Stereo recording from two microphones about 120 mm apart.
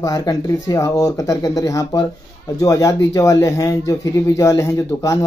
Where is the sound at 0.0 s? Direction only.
30° left (ahead or behind).